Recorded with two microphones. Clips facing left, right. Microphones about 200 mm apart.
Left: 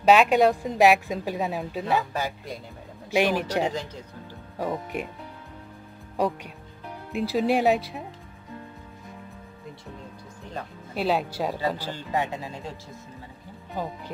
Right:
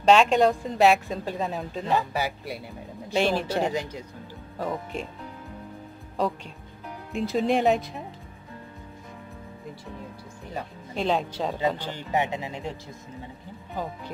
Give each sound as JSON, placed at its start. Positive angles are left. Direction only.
{"t": 0.0, "sound": "a woman's voice", "side_deg": 5}
{"t": 2.1, "sound": "speech", "side_deg": -10}
{"t": 3.1, "sound": "a woman's voice", "side_deg": 10}
{"t": 3.7, "sound": "speech", "side_deg": -10}
{"t": 4.6, "sound": "a woman's voice", "side_deg": 10}
{"t": 6.1, "sound": "a woman's voice", "side_deg": 15}
{"t": 11.0, "sound": "speech", "side_deg": 5}
{"t": 11.9, "sound": "speech", "side_deg": -20}